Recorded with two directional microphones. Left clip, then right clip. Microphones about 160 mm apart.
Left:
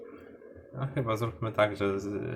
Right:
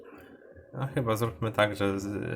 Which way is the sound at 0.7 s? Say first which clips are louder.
Right 2 dB; 40° right (ahead or behind).